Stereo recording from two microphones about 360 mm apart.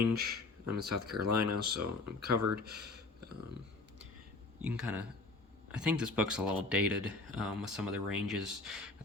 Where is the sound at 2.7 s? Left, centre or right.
Right.